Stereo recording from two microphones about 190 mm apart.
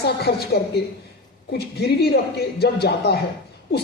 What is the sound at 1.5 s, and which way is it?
A woman's voice, 55° left (ahead or behind).